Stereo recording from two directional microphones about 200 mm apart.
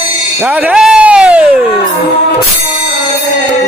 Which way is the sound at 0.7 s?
5° right (ahead or behind).